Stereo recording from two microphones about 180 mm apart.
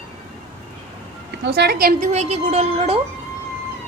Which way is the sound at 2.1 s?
35° right (ahead or behind).